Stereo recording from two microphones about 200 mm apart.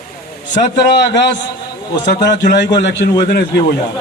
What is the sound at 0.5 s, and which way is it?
Speech, 55° left (ahead or behind).